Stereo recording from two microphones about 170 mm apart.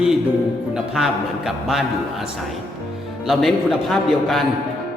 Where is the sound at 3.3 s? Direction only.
Centre (ahead or behind).